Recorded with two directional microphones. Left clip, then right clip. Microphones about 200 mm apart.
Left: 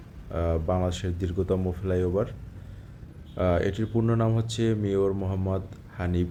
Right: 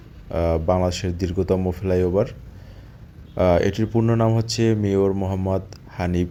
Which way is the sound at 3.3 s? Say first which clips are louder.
Right 7 dB; 20° right (ahead or behind).